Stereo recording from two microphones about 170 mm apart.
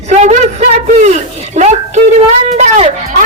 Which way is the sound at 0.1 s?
40° right (ahead or behind).